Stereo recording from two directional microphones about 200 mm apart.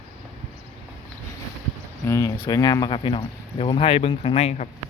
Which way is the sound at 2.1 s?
15° left (ahead or behind).